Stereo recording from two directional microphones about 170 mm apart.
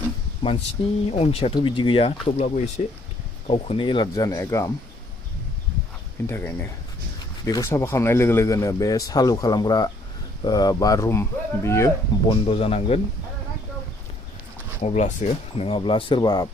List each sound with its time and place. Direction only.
0.4 s speech: 30° left (ahead or behind)
6.2 s speech: 15° left (ahead or behind)
12.3 s speech: 35° left (ahead or behind)
14.8 s speech: 40° left (ahead or behind); by 16.5 s 25° left (ahead or behind)